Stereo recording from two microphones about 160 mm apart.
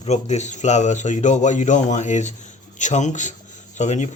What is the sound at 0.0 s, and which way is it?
Speech, 45° left (ahead or behind).